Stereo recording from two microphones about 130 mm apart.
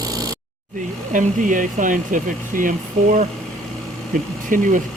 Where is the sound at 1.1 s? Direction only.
85° right.